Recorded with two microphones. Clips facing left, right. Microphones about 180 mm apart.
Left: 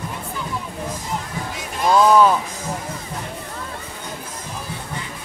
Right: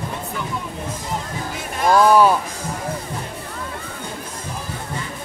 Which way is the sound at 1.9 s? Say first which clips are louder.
Even; 10° right (ahead or behind).